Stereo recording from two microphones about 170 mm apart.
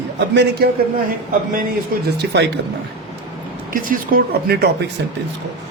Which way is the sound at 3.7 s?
55° right (ahead or behind).